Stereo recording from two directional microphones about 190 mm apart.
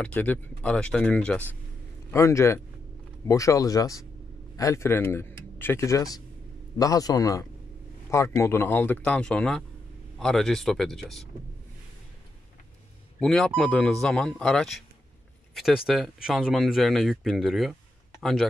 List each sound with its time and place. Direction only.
0.0 s a man's voice: 10° left (ahead or behind)
13.2 s speech: centre (ahead or behind)